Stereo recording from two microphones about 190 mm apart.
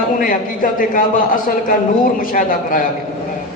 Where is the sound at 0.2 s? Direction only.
45° left (ahead or behind).